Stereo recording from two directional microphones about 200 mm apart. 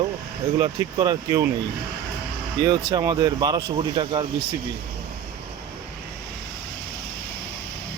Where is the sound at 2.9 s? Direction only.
20° right (ahead or behind).